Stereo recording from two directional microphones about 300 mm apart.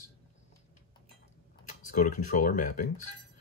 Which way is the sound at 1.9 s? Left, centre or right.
Left.